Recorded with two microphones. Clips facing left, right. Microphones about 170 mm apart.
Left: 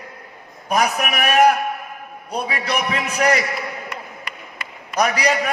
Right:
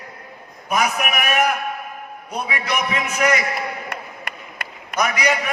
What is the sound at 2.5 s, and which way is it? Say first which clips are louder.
Speech: even; 35° left (ahead or behind).